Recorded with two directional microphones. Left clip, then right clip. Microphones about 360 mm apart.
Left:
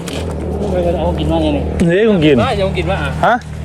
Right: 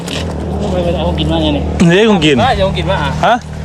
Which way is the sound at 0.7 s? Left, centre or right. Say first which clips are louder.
Even; right.